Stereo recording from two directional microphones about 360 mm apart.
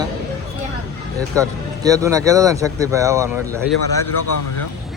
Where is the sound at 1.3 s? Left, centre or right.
Centre.